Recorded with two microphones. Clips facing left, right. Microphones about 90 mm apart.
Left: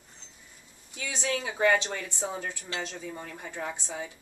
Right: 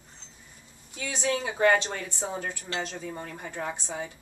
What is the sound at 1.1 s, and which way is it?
Speech, 20° right (ahead or behind).